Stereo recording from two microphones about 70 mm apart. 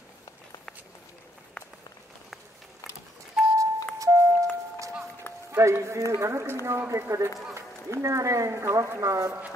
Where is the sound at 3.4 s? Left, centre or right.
Centre.